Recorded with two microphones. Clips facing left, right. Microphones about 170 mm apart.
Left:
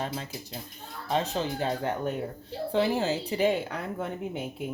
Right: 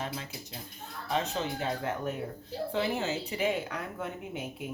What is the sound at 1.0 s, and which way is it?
A woman's voice, 35° left (ahead or behind).